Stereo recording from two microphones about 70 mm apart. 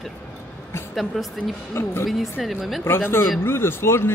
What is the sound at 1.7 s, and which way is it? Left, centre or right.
Speech, left.